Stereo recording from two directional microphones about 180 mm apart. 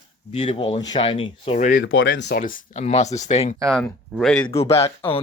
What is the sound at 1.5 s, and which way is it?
Speech, 45° left (ahead or behind).